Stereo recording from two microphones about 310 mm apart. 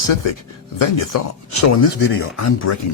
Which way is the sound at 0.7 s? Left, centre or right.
Left.